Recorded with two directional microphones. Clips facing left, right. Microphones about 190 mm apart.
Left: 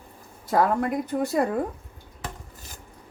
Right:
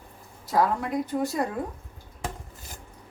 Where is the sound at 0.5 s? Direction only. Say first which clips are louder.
Left 2 dB; 55° left (ahead or behind).